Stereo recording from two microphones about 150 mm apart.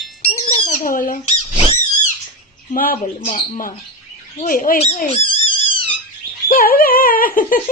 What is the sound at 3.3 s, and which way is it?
Speech, 60° left (ahead or behind).